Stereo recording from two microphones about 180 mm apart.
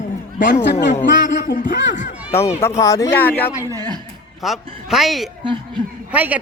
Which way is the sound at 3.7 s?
20° right (ahead or behind).